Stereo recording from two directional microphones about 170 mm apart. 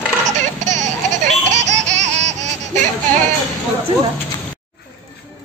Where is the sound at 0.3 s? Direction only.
45° right (ahead or behind).